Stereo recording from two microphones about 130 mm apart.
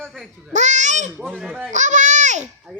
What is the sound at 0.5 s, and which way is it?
Babbling, 65° right (ahead or behind).